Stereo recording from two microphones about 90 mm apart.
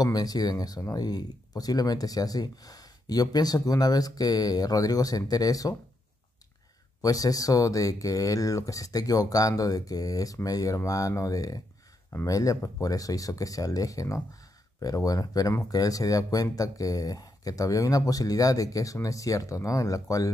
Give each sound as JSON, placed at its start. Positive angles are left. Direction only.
{"t": 0.0, "sound": "speech", "side_deg": 45}
{"t": 7.0, "sound": "speech", "side_deg": 40}